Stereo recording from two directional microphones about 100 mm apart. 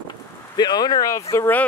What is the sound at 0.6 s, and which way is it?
Speech, 45° left (ahead or behind).